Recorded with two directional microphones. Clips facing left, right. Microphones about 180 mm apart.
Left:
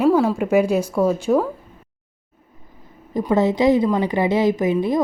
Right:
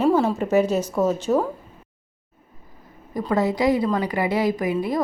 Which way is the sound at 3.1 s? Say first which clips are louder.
Left 4 dB; 25° left (ahead or behind).